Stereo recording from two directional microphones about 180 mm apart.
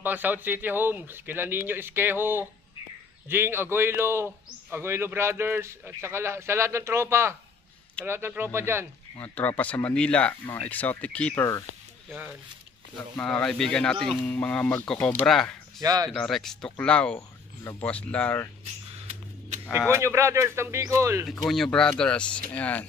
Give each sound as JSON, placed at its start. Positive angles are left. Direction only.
{"t": 0.0, "sound": "a man's voice", "side_deg": -10}
{"t": 9.2, "sound": "speech", "side_deg": 10}
{"t": 13.2, "sound": "speech", "side_deg": 5}
{"t": 15.8, "sound": "speech", "side_deg": -20}
{"t": 16.1, "sound": "speech", "side_deg": 0}
{"t": 19.9, "sound": "a man's voice", "side_deg": -15}
{"t": 21.3, "sound": "speech", "side_deg": 0}